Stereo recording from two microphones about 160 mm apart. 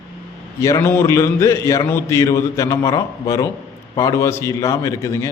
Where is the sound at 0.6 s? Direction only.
20° left (ahead or behind).